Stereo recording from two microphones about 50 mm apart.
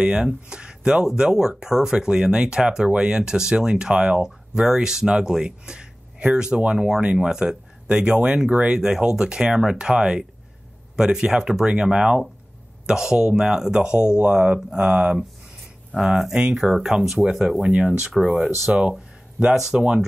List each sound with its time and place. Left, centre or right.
0.0 s speech: right
16.0 s speech: centre